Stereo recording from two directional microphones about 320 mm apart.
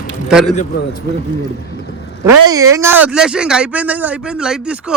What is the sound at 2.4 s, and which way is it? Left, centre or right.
Speech, centre.